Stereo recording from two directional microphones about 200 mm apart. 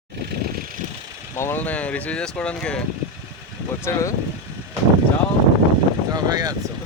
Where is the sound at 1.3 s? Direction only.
10° left (ahead or behind).